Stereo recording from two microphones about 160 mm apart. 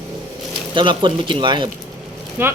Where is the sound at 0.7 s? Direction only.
30° right (ahead or behind).